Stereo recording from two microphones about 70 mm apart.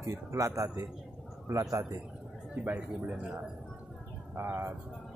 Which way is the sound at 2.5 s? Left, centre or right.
Right.